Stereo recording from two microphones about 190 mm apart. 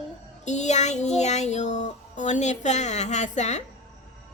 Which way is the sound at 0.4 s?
40° left (ahead or behind).